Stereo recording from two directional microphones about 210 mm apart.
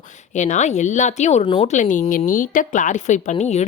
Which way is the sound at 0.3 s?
35° left (ahead or behind).